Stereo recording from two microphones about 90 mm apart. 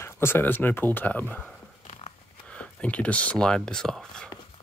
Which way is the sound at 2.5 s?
15° left (ahead or behind).